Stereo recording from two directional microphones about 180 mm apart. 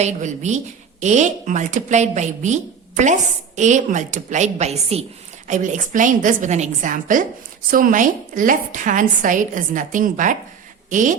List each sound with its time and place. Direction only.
0.0 s a woman's voice: 40° right (ahead or behind)